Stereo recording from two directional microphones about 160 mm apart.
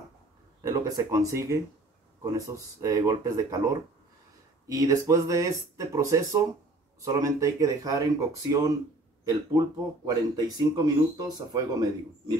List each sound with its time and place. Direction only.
0.6 s speech: 20° right (ahead or behind)